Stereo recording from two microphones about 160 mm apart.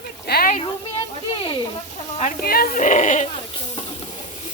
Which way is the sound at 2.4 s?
70° left (ahead or behind).